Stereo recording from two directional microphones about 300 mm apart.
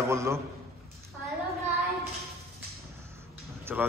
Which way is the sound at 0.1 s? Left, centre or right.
Centre.